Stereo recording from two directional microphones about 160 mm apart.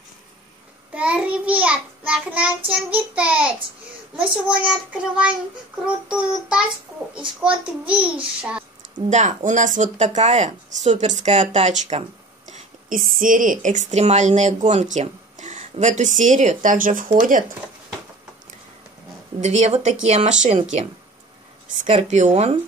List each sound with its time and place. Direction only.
0.9 s child singing: 10° right (ahead or behind)
8.9 s a woman's voice: 50° right (ahead or behind)
19.4 s speech: 45° right (ahead or behind)
21.8 s speech: 45° right (ahead or behind)